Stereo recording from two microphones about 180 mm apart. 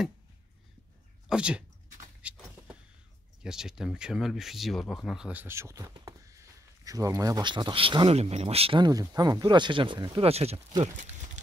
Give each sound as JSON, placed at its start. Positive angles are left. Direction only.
{"t": 1.3, "sound": "speech", "side_deg": -5}
{"t": 2.2, "sound": "a sound", "side_deg": -5}
{"t": 3.4, "sound": "speech", "side_deg": -5}